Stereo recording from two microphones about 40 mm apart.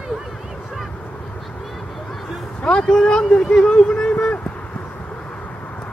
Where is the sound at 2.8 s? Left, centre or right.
Centre.